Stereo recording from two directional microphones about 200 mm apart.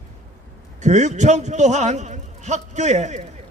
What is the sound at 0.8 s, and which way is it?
A man's voice, 35° right (ahead or behind).